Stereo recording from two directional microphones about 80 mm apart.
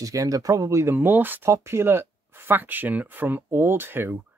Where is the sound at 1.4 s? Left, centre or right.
Right.